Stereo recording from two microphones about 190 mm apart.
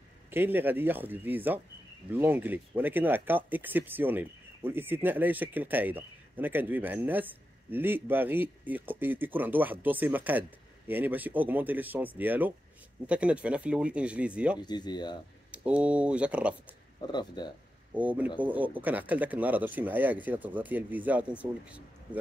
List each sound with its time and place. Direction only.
0.3 s speech: 10° right (ahead or behind)
14.6 s speech: 20° left (ahead or behind)
15.5 s speech: 5° right (ahead or behind)
17.0 s speech: 20° left (ahead or behind)
17.9 s speech: 10° right (ahead or behind)